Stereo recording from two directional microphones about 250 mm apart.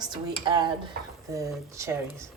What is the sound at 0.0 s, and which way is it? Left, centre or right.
Speech, centre.